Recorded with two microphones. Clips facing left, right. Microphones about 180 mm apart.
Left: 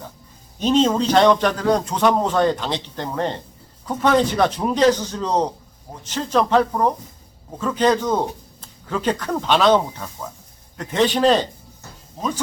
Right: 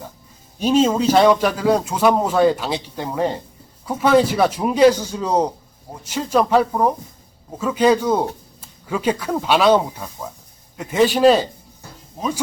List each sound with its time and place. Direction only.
0.6 s a man's voice: 10° right (ahead or behind)